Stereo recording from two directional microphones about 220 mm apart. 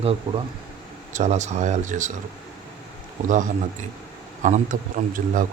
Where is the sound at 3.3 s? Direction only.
35° right (ahead or behind).